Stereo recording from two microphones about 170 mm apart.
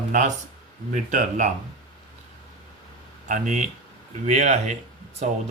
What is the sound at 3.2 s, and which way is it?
Speech, 45° right (ahead or behind).